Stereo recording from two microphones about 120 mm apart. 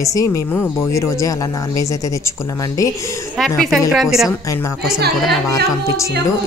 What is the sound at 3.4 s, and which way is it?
Speech, centre (ahead or behind).